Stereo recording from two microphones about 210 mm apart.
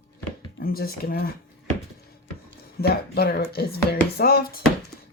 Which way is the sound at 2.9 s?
50° left (ahead or behind).